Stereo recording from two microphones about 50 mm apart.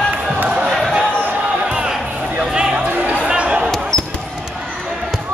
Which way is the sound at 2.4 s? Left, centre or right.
Right.